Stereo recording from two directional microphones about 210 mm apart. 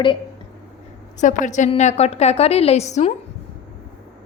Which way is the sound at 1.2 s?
35° left (ahead or behind).